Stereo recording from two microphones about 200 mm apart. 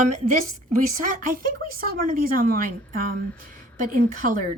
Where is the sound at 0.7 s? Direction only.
40° right (ahead or behind).